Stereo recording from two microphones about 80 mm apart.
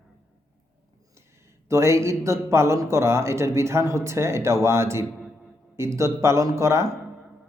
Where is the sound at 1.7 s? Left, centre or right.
Right.